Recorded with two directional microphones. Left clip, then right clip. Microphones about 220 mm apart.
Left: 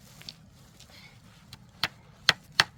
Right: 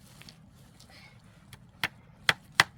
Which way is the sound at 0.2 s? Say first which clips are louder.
Left 7 dB; 25° left (ahead or behind).